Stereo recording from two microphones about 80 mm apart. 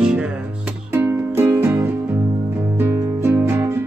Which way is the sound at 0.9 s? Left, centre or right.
Right.